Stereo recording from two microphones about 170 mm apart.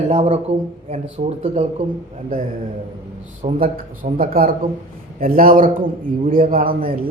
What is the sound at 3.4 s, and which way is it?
Speech, 55° right (ahead or behind).